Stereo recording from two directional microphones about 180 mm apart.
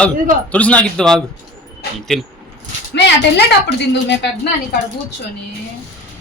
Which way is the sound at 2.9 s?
70° left (ahead or behind).